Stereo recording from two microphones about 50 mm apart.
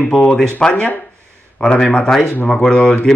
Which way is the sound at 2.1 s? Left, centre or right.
Centre.